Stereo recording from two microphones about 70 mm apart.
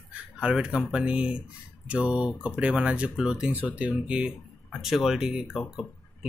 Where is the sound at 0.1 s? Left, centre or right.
Centre.